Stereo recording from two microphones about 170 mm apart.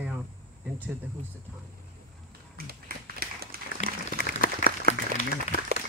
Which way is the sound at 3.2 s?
60° right (ahead or behind).